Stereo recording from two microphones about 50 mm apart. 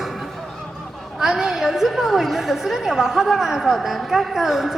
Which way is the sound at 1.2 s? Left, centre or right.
Centre.